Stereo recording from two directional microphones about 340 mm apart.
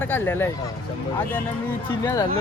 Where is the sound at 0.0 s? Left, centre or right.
Centre.